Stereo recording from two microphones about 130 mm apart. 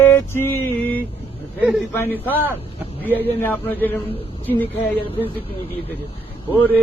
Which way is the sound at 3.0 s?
15° right (ahead or behind).